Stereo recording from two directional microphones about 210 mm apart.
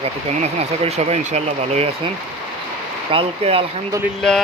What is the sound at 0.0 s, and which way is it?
Speech, 30° right (ahead or behind).